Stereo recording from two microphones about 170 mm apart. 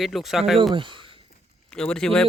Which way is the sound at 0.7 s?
30° right (ahead or behind).